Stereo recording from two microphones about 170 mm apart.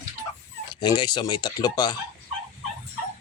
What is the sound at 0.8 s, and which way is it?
Speech, 25° left (ahead or behind).